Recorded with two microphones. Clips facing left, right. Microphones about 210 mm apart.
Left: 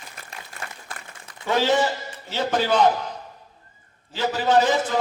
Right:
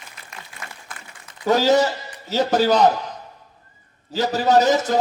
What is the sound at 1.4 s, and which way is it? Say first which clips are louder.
A man's voice: right 4 dB; 40° right (ahead or behind).